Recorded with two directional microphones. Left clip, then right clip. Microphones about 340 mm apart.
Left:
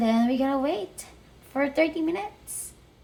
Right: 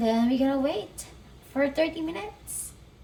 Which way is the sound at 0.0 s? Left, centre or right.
Centre.